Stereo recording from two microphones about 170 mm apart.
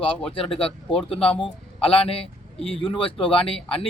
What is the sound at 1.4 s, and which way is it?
A man's voice, 35° left (ahead or behind).